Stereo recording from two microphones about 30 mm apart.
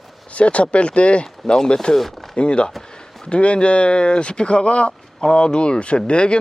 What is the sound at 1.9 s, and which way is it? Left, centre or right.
Speech, centre.